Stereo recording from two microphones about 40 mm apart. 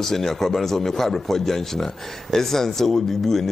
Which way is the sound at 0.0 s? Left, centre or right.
Centre.